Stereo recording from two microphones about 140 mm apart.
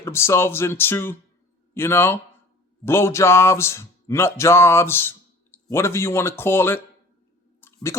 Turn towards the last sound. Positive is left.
turn(degrees=15)  # may be behind; listen again after turning